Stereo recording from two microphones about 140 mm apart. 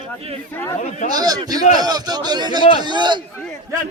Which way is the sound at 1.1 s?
30° right (ahead or behind).